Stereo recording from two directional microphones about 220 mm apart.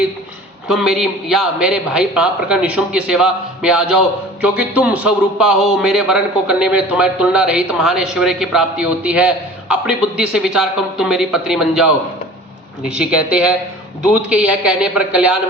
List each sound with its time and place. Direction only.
0.7 s a man's voice: centre (ahead or behind)